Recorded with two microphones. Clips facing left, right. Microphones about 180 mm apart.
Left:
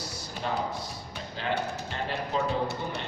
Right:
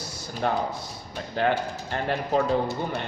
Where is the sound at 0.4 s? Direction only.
60° right (ahead or behind).